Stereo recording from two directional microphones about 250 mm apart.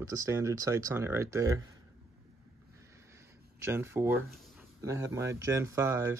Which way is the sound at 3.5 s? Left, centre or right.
Centre.